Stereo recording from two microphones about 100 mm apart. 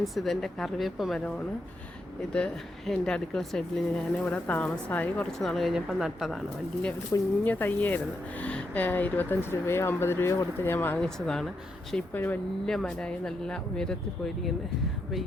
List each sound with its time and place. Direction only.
0.0 s a woman's voice: centre (ahead or behind)
2.3 s a woman's voice: 5° left (ahead or behind)
4.3 s speech: 15° left (ahead or behind)
5.4 s a woman's voice: centre (ahead or behind)
7.1 s speech: 30° left (ahead or behind)
7.4 s speech: 20° left (ahead or behind)
10.9 s speech: 5° left (ahead or behind)
12.1 s speech: 20° left (ahead or behind)
12.6 s speech: 5° left (ahead or behind)